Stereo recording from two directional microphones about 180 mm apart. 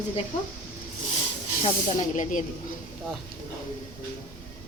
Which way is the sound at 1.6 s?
40° left (ahead or behind).